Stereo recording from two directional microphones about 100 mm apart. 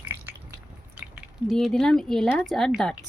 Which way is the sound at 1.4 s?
Centre (ahead or behind).